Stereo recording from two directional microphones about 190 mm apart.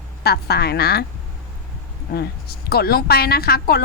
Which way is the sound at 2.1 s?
55° left (ahead or behind).